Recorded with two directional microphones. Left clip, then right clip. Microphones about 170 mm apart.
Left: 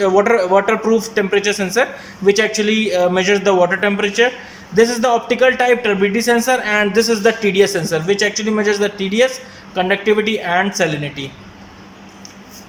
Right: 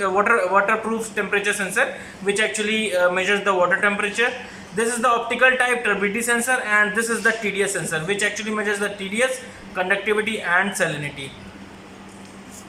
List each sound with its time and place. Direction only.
0.0 s speech: 45° left (ahead or behind)